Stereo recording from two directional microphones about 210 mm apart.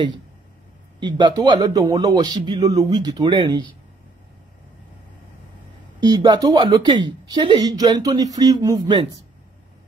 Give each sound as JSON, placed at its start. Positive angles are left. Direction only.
{"t": 0.9, "sound": "a woman's voice", "side_deg": -20}
{"t": 5.9, "sound": "a woman's voice", "side_deg": -20}